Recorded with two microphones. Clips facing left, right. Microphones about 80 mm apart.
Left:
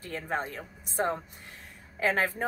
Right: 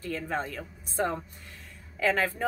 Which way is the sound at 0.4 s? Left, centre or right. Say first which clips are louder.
Right 1 dB; left.